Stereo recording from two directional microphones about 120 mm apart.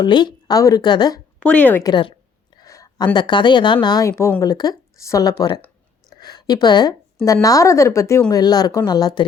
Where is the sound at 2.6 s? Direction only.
30° left (ahead or behind).